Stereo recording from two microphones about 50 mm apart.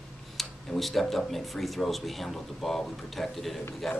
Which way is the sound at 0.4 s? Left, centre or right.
Centre.